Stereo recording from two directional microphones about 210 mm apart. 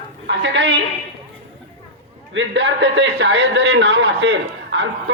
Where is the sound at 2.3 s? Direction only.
60° right (ahead or behind).